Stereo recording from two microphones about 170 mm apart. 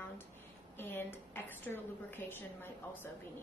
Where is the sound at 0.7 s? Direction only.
15° left (ahead or behind).